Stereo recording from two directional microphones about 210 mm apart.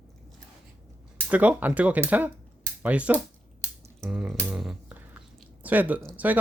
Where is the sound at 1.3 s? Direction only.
5° right (ahead or behind).